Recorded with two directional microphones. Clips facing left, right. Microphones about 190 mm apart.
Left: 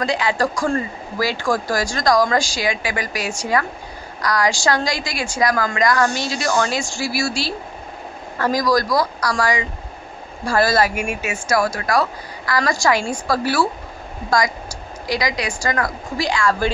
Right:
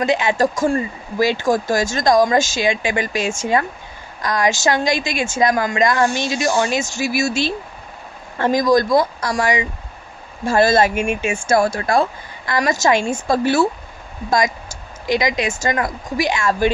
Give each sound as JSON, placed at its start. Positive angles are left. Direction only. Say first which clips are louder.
{"t": 0.0, "sound": "speech", "louder": "right 3 dB", "side_deg": -20}
{"t": 15.0, "sound": "speech", "louder": "right 4 dB", "side_deg": -20}